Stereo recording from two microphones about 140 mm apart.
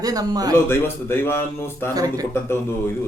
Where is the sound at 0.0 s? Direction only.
25° right (ahead or behind).